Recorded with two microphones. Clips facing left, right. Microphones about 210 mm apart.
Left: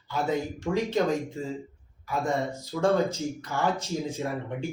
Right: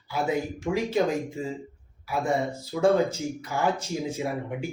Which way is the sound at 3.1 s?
15° right (ahead or behind).